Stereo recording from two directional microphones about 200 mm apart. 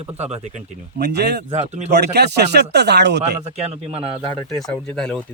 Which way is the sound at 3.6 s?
30° right (ahead or behind).